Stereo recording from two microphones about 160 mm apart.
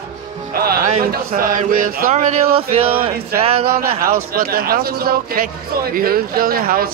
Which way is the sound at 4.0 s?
70° right (ahead or behind).